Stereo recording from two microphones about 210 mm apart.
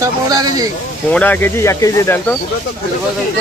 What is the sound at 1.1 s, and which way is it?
Speech, 10° left (ahead or behind).